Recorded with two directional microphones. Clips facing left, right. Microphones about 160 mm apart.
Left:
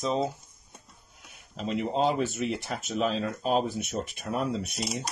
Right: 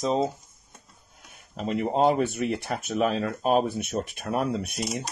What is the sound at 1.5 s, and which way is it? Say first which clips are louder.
Speech: right 3 dB; 50° right (ahead or behind).